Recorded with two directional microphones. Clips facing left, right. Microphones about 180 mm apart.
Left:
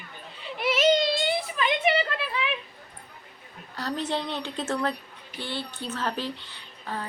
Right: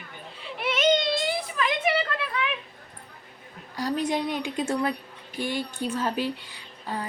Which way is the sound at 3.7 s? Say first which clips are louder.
Right 3 dB; 10° right (ahead or behind).